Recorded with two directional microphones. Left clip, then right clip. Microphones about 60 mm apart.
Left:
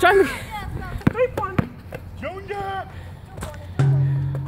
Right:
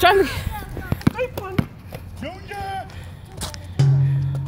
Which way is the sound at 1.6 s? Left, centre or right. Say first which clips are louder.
Left 1 dB; right.